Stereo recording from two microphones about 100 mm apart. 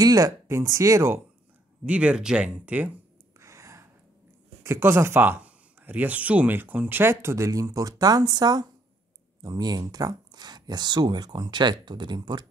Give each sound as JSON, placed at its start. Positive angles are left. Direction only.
{"t": 0.0, "sound": "speech", "side_deg": -35}
{"t": 1.9, "sound": "speech", "side_deg": -10}
{"t": 3.3, "sound": "gasp", "side_deg": -30}
{"t": 4.6, "sound": "speech", "side_deg": -25}